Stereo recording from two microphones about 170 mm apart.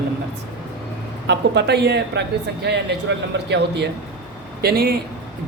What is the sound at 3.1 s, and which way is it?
Speech, 90° right.